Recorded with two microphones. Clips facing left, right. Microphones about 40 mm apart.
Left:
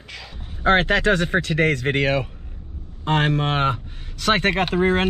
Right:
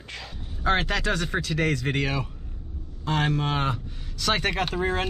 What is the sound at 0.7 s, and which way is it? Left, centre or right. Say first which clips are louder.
Speech: left 7 dB; left.